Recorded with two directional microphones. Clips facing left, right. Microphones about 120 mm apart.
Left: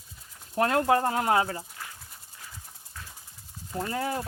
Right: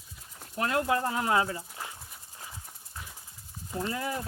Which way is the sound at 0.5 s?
50° left (ahead or behind).